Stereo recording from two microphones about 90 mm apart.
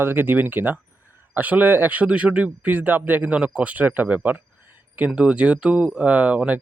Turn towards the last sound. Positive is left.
turn(degrees=-15)  # may be behind; listen again after turning